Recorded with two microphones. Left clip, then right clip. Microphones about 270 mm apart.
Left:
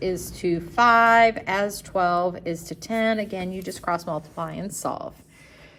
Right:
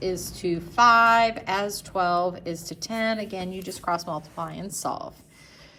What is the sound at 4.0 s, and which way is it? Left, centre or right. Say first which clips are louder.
Speech: left 2 dB; left.